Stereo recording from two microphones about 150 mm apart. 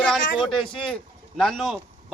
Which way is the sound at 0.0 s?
5° left (ahead or behind).